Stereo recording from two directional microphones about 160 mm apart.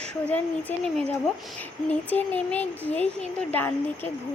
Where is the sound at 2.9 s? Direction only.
45° left (ahead or behind).